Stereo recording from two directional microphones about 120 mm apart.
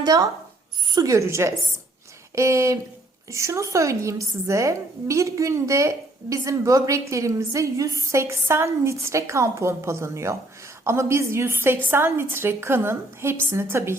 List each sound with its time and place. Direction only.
0.0 s a woman's voice: 30° right (ahead or behind)